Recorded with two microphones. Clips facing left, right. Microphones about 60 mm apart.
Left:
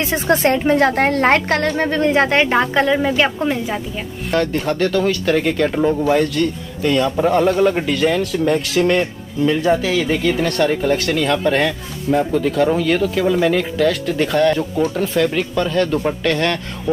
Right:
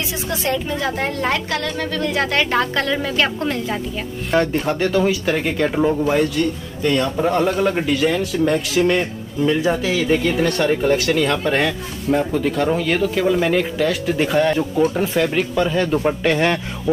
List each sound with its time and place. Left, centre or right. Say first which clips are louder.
0.1 s speech: left 8 dB; left; by 3.8 s centre
4.3 s speech: even; centre